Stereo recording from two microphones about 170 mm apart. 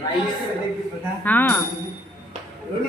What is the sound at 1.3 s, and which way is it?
Speech, 10° left (ahead or behind).